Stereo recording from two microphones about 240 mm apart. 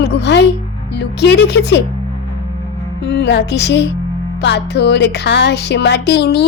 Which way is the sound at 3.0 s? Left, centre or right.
Left.